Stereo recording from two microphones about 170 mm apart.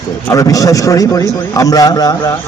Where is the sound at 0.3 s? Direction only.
20° left (ahead or behind).